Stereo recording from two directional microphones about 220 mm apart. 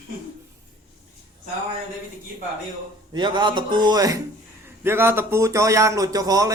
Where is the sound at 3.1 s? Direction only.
20° right (ahead or behind).